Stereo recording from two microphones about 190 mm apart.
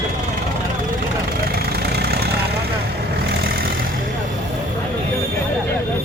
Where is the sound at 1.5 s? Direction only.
55° right (ahead or behind).